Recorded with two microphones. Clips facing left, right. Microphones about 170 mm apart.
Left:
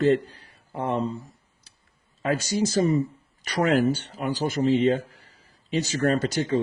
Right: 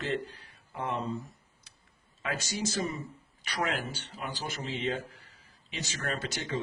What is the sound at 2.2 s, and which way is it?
A man's voice, 35° left (ahead or behind).